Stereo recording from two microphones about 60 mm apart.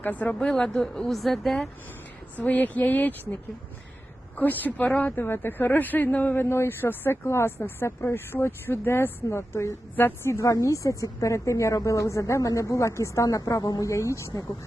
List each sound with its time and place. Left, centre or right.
0.0 s speech: left
0.3 s speech: centre
2.5 s speech: left
4.4 s speech: left
6.4 s a woman's voice: left
13.9 s a woman's voice: left